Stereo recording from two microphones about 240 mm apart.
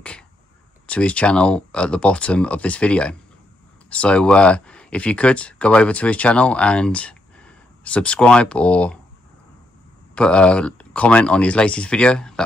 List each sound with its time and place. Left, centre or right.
0.8 s speech: centre
10.1 s speech: centre